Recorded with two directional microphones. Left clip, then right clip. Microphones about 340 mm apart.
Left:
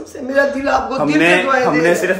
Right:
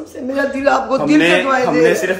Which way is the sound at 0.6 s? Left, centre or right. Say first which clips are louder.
Right 2 dB; centre.